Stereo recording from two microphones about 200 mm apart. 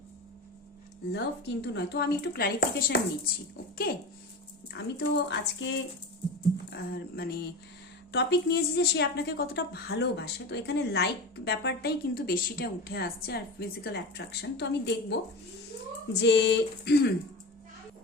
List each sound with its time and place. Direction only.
1.1 s speech: 60° left (ahead or behind)
4.7 s a woman's voice: 60° left (ahead or behind)
6.7 s a woman's voice: 50° left (ahead or behind)